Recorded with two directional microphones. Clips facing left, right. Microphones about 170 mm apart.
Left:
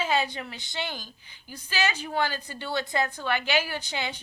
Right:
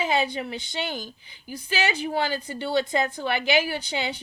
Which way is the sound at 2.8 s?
20° right (ahead or behind).